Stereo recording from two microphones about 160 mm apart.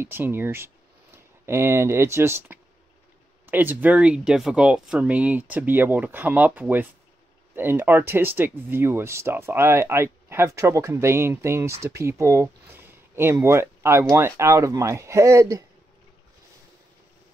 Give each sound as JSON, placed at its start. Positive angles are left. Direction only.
{"t": 0.0, "sound": "speech", "side_deg": -15}